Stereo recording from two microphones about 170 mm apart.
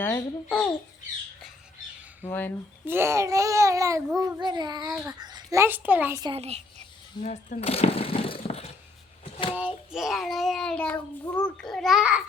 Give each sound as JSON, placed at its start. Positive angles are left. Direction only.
{"t": 0.0, "sound": "a child's voice", "side_deg": 15}
{"t": 2.2, "sound": "a child's voice", "side_deg": 10}
{"t": 2.8, "sound": "a child's voice", "side_deg": -15}
{"t": 4.2, "sound": "child singing", "side_deg": -25}
{"t": 5.2, "sound": "a child's voice", "side_deg": -20}
{"t": 6.3, "sound": "a child's voice", "side_deg": -40}
{"t": 7.2, "sound": "speech", "side_deg": 45}
{"t": 9.6, "sound": "a child's voice", "side_deg": -5}